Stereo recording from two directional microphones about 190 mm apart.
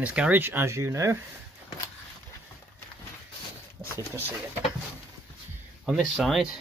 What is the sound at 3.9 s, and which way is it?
Speech, 10° right (ahead or behind).